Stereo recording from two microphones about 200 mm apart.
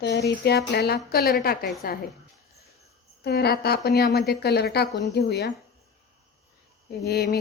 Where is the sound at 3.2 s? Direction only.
55° left (ahead or behind).